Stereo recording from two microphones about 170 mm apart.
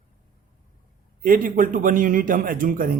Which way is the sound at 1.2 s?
55° right (ahead or behind).